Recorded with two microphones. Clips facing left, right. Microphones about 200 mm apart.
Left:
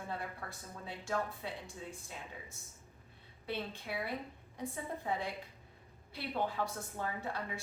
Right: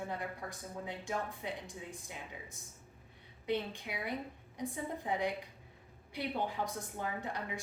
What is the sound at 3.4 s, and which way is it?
A woman's voice, 15° right (ahead or behind).